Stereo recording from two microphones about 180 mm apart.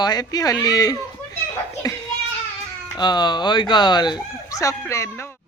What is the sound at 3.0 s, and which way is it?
Speech, 25° left (ahead or behind).